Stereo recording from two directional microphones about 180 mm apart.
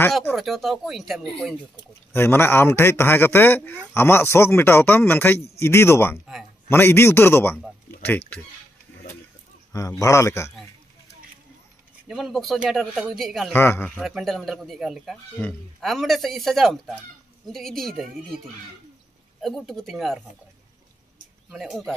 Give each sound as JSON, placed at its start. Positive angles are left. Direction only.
{"t": 0.4, "sound": "speech", "side_deg": 0}
{"t": 2.1, "sound": "a man's voice", "side_deg": 15}
{"t": 7.9, "sound": "a sound", "side_deg": 15}
{"t": 9.7, "sound": "a man's voice", "side_deg": 20}
{"t": 12.1, "sound": "speech", "side_deg": 0}
{"t": 13.6, "sound": "a man's voice", "side_deg": 10}
{"t": 13.9, "sound": "speech", "side_deg": 0}
{"t": 19.4, "sound": "speech", "side_deg": 0}
{"t": 21.5, "sound": "speech", "side_deg": 0}